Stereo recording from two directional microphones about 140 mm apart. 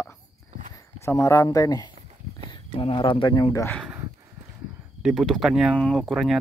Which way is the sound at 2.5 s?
35° left (ahead or behind).